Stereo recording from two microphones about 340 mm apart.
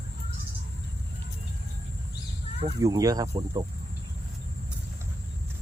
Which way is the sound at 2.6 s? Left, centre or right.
Centre.